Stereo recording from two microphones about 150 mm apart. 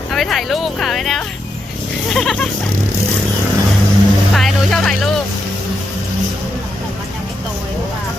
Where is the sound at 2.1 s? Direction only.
5° left (ahead or behind).